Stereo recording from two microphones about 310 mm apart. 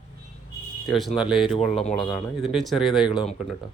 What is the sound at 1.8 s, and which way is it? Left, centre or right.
Speech, centre.